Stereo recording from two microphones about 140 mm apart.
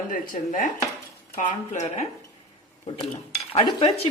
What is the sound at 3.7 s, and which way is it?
Speech, 45° left (ahead or behind).